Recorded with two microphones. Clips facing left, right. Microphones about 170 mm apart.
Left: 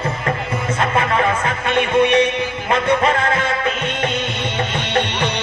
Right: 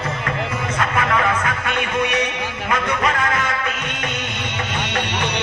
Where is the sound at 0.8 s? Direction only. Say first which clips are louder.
Left 2 dB; 30° left (ahead or behind).